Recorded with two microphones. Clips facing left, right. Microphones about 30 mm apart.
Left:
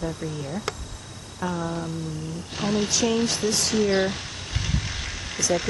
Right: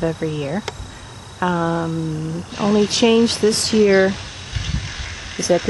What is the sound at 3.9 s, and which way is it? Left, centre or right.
Boiling, centre.